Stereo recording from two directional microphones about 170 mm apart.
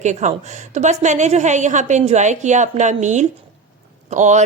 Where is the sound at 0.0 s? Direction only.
45° right (ahead or behind).